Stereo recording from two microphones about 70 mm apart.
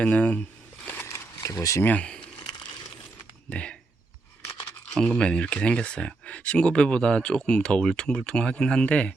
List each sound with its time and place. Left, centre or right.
0.0 s speech: left
0.9 s a sound: left
1.4 s speech: left
1.8 s speech: left
3.5 s speech: centre
4.9 s speech: centre